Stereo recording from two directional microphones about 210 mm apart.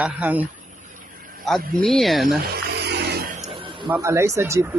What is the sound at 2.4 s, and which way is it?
Music, 45° right (ahead or behind).